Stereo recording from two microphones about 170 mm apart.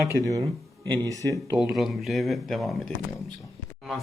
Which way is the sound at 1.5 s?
Centre (ahead or behind).